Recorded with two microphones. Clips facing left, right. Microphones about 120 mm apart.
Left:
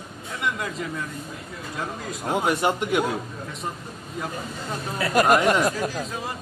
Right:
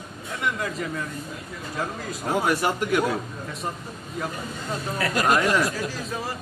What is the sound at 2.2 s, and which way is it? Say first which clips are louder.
Speech: left 1 dB; 20° left (ahead or behind).